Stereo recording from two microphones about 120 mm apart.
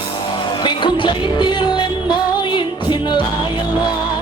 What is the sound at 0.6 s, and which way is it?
Music, 40° left (ahead or behind).